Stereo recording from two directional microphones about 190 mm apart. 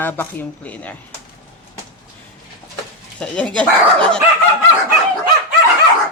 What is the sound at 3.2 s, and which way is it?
Speech, 5° left (ahead or behind).